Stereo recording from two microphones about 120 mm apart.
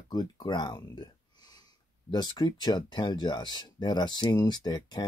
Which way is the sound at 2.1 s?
35° left (ahead or behind).